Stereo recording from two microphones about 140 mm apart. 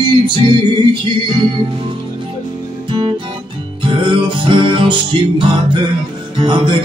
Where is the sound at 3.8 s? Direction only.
35° right (ahead or behind).